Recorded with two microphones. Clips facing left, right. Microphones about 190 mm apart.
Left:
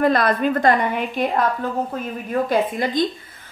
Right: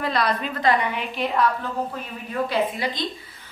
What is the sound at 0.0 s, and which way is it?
A woman's voice, 50° left (ahead or behind).